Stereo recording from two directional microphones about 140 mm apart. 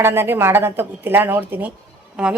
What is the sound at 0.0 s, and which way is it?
A woman's voice, 15° right (ahead or behind).